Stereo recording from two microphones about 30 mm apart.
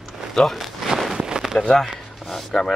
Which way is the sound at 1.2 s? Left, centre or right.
Right.